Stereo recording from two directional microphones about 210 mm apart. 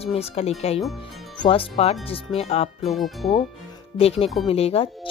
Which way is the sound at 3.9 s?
30° left (ahead or behind).